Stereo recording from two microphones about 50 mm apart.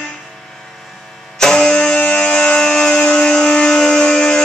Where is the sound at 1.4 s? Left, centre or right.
Centre.